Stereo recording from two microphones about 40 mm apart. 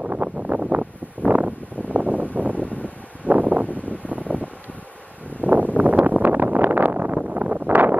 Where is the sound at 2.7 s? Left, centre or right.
Left.